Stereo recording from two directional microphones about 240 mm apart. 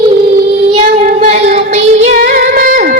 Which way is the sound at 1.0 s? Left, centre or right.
Right.